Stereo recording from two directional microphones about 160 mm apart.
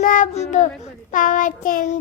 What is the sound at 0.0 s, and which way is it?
Child singing, 55° left (ahead or behind).